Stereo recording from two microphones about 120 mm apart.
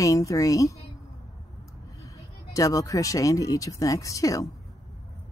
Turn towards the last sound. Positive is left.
turn(degrees=30)  # may be behind; listen again after turning